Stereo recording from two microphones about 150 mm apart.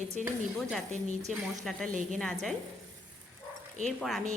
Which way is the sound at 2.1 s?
5° left (ahead or behind).